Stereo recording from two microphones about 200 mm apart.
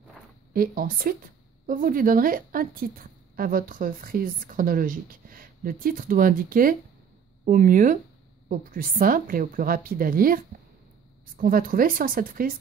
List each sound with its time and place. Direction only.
0.5 s a woman's voice: 45° right (ahead or behind)